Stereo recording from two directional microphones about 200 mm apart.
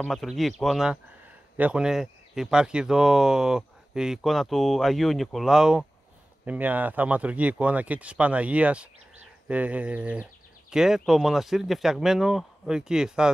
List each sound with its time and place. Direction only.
0.0 s speech: centre (ahead or behind)